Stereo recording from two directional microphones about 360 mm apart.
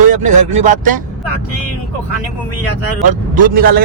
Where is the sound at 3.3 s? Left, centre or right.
Right.